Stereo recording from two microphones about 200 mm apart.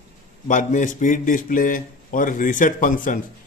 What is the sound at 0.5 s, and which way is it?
A man's voice, 40° left (ahead or behind).